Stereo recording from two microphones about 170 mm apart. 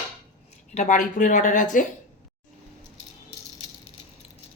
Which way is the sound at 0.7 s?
50° left (ahead or behind).